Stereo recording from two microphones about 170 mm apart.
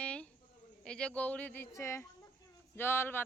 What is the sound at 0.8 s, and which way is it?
Speech, 5° left (ahead or behind).